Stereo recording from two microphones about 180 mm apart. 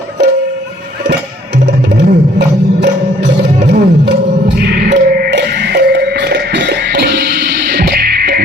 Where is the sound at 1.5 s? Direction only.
65° right (ahead or behind).